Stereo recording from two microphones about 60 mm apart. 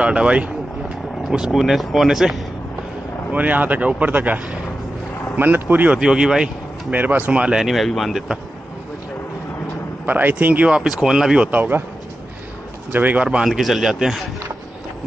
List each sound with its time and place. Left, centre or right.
0.0 s vehicle: centre
1.4 s speech: centre
3.3 s speech: right
5.9 s speech: centre
6.9 s speech: right; by 8.2 s centre
10.0 s speech: right
10.7 s speech: centre
11.5 s speech: right
12.9 s speech: right
13.5 s speech: centre